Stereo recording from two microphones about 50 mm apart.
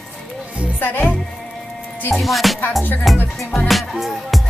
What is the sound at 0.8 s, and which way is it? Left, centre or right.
Speech, left.